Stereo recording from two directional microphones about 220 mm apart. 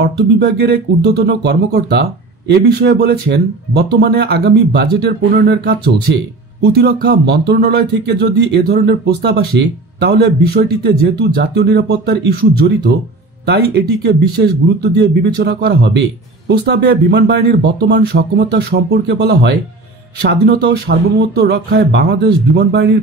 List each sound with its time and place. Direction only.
0.0 s speech: 50° right (ahead or behind)